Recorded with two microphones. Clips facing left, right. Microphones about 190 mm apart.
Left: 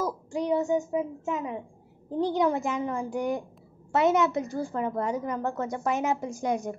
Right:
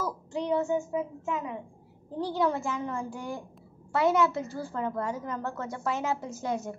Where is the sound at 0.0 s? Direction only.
10° left (ahead or behind).